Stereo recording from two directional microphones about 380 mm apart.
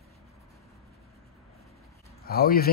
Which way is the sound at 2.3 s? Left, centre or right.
Left.